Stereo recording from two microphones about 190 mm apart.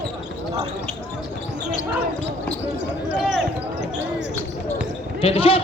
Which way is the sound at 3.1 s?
Centre (ahead or behind).